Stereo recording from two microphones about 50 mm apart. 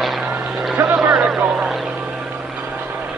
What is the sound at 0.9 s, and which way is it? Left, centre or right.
Vehicle, centre.